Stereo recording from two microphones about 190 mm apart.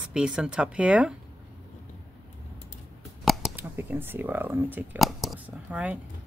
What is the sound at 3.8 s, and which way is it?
Speech, 10° right (ahead or behind).